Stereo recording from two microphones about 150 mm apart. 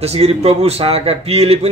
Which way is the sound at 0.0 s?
45° right (ahead or behind).